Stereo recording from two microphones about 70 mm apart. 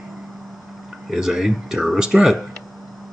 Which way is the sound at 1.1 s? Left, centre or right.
Centre.